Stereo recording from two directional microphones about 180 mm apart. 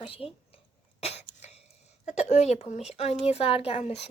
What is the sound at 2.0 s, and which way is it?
Speech, 40° left (ahead or behind).